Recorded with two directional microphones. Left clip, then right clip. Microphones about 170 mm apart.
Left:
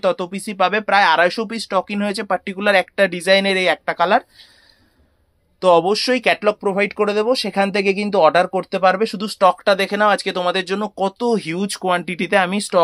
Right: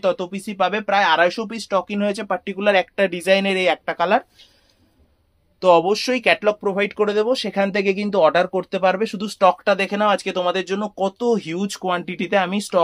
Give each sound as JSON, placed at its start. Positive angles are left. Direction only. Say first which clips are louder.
{"t": 0.0, "sound": "speech", "louder": "left 2 dB", "side_deg": 35}
{"t": 5.6, "sound": "speech", "louder": "left 1 dB", "side_deg": 25}